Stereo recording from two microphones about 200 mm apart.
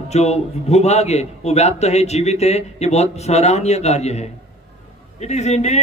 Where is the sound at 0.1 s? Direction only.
30° left (ahead or behind).